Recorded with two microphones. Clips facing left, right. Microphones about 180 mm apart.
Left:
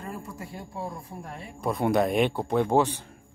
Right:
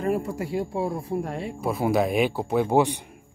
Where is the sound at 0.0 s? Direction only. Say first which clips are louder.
Right 12 dB; 75° right (ahead or behind).